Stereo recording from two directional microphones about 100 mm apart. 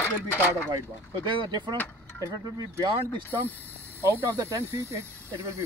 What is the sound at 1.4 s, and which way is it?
Speech, 50° right (ahead or behind).